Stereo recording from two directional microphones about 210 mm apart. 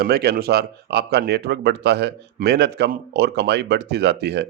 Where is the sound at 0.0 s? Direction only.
50° right (ahead or behind).